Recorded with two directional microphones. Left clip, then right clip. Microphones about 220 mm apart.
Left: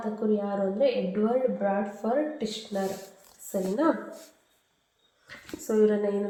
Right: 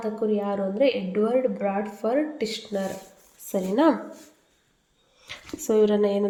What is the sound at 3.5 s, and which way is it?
Speech, 45° right (ahead or behind).